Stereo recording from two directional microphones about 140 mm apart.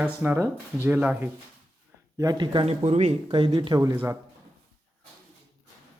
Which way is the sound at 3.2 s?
35° right (ahead or behind).